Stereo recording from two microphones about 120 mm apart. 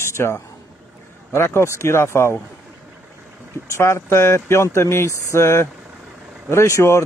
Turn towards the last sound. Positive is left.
turn(degrees=25)  # may be behind; listen again after turning